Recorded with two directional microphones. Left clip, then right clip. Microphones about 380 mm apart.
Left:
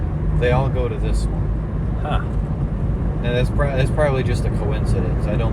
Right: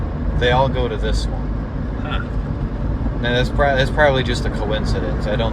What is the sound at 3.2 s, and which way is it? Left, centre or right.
Speech, right.